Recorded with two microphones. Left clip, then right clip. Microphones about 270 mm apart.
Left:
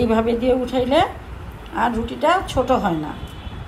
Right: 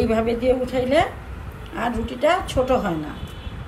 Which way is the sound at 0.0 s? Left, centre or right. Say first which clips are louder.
Left 2 dB; left.